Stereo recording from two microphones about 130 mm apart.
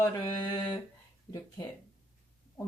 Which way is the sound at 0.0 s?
35° left (ahead or behind).